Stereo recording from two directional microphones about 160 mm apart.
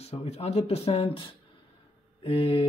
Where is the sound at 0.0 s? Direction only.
40° left (ahead or behind).